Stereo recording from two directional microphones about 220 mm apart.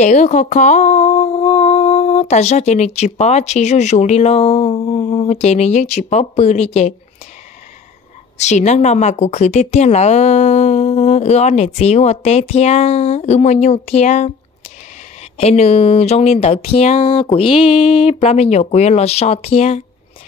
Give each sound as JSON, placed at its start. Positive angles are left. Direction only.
{"t": 0.0, "sound": "speech", "side_deg": 35}
{"t": 8.4, "sound": "a woman's voice", "side_deg": 30}
{"t": 15.3, "sound": "speech", "side_deg": 30}